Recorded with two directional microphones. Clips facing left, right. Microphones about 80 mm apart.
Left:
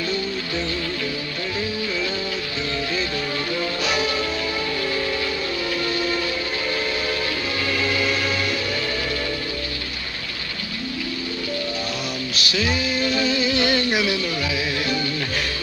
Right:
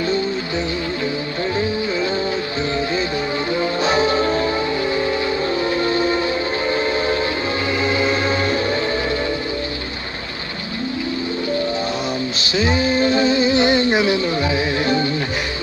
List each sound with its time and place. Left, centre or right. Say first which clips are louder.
3.5 s music: right 7 dB; right
5.8 s train: right 4 dB; right
7.8 s music: right 5 dB; right
12.4 s music: right 4 dB; right